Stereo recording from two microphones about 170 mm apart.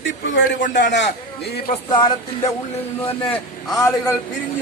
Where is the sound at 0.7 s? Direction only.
90° left.